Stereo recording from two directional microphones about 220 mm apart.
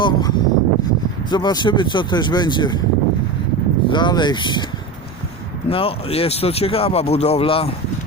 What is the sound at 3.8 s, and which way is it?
Speech, 20° left (ahead or behind).